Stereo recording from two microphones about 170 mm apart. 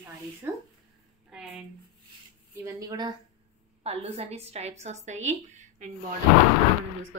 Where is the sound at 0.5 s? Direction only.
15° right (ahead or behind).